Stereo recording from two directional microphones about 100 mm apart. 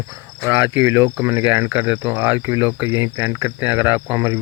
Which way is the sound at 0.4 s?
25° right (ahead or behind).